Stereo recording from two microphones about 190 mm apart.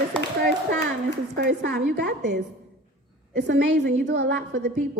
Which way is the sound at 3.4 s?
65° right (ahead or behind).